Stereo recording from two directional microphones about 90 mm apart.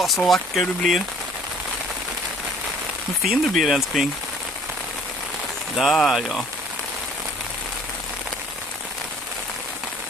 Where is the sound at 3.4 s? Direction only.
Centre (ahead or behind).